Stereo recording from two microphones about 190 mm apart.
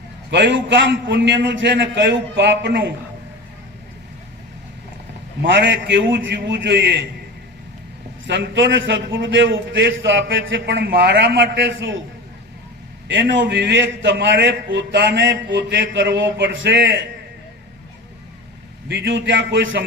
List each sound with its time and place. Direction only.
0.3 s a man's voice: 65° right (ahead or behind)
5.4 s a man's voice: 70° right (ahead or behind)
8.3 s a man's voice: 70° right (ahead or behind)
13.1 s a man's voice: 75° right (ahead or behind)
18.9 s a man's voice: 65° right (ahead or behind)